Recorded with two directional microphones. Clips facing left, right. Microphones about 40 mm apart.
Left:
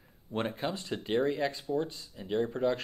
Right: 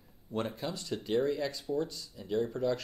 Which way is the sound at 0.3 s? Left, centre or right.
Left.